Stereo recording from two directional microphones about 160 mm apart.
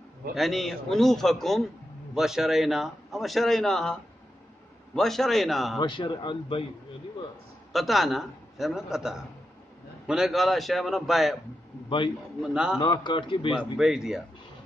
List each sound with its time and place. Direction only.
0.3 s a man's voice: centre (ahead or behind)
5.8 s speech: 30° left (ahead or behind)
7.7 s a man's voice: centre (ahead or behind)
12.4 s a man's voice: 5° right (ahead or behind)
12.8 s speech: 30° left (ahead or behind)
13.6 s a man's voice: 5° right (ahead or behind)